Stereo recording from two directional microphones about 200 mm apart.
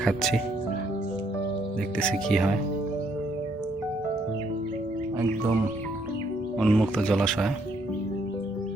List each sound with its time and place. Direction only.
0.0 s speech: centre (ahead or behind)
2.0 s speech: centre (ahead or behind)
6.6 s speech: centre (ahead or behind)